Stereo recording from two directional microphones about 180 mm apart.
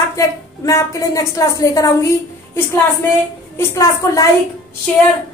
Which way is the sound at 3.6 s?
15° left (ahead or behind).